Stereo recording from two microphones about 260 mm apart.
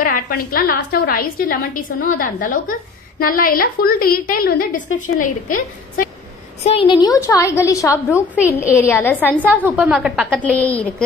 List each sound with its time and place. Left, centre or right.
0.0 s a woman's voice: left
6.6 s a woman's voice: left
9.7 s a woman's voice: centre